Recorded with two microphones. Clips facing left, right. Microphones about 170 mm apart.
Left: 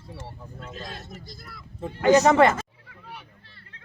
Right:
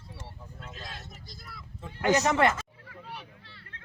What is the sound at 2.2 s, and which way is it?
Speech, 90° left.